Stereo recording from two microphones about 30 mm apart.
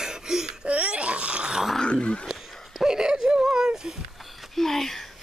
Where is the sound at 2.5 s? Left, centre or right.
Centre.